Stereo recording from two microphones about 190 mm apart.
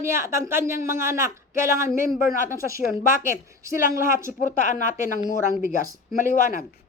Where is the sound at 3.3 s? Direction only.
15° right (ahead or behind).